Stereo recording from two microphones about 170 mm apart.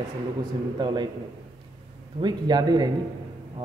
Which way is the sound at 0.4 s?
25° right (ahead or behind).